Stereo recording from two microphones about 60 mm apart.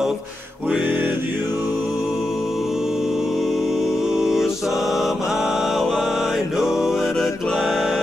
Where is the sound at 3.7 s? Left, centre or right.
Centre.